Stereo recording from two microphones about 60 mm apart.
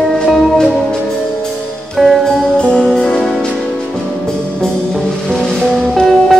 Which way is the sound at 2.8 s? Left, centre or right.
Centre.